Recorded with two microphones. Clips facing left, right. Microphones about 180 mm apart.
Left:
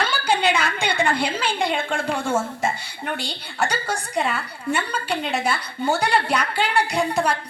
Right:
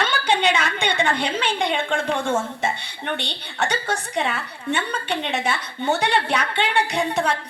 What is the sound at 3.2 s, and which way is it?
A woman's voice, centre (ahead or behind).